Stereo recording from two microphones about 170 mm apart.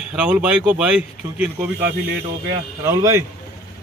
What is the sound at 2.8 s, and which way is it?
Speech, 15° right (ahead or behind).